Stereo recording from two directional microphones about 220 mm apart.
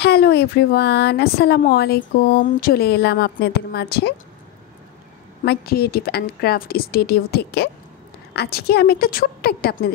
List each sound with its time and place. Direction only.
0.0 s speech: 45° left (ahead or behind)
5.4 s speech: 45° left (ahead or behind)